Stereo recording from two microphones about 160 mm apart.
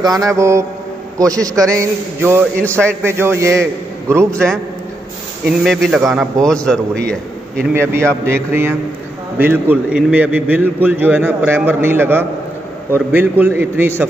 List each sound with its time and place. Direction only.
0.0 s a man's voice: 20° right (ahead or behind)
4.3 s a man's voice: 5° left (ahead or behind)
5.6 s a man's voice: centre (ahead or behind)
7.7 s a man's voice: 15° right (ahead or behind)